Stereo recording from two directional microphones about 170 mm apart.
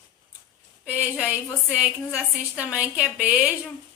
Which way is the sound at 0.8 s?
5° right (ahead or behind).